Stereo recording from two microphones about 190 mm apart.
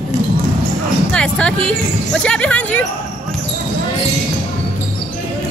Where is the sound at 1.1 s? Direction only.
5° left (ahead or behind).